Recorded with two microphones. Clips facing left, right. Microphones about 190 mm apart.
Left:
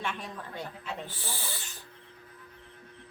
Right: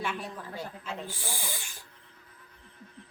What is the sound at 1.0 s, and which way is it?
Speech, 10° right (ahead or behind).